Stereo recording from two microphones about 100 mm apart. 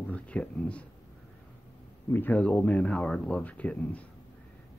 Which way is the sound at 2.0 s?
20° left (ahead or behind).